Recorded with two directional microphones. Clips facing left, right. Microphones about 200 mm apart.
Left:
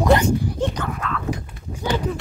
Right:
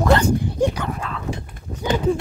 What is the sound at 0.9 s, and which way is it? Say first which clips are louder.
Speech: left 2 dB; 30° right (ahead or behind).